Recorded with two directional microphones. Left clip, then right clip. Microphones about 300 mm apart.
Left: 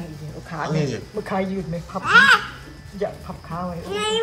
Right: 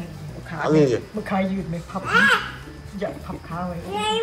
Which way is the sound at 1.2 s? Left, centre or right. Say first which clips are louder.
Even; left.